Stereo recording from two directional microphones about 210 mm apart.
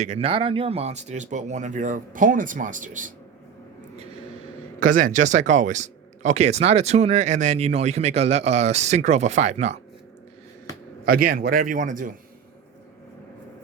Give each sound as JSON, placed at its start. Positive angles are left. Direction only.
{"t": 0.0, "sound": "speech", "side_deg": -30}
{"t": 4.8, "sound": "speech", "side_deg": -40}
{"t": 11.0, "sound": "speech", "side_deg": -45}